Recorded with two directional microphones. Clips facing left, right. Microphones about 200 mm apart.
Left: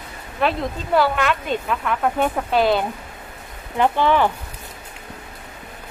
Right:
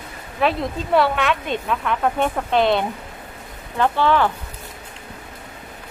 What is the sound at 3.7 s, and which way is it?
Speech, 15° left (ahead or behind).